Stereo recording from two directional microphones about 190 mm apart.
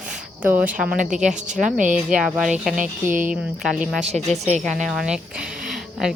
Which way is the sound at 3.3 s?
5° right (ahead or behind).